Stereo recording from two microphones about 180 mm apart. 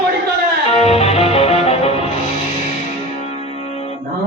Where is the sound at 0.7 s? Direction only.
35° left (ahead or behind).